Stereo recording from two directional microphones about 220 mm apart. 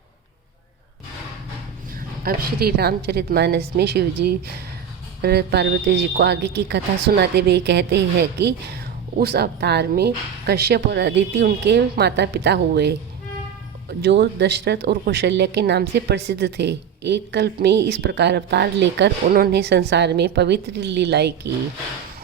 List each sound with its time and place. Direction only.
2.2 s speech: 45° right (ahead or behind)
14.0 s speech: 50° right (ahead or behind)